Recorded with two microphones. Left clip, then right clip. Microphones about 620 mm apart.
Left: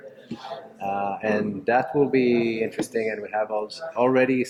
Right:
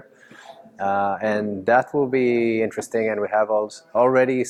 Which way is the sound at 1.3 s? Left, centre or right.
Right.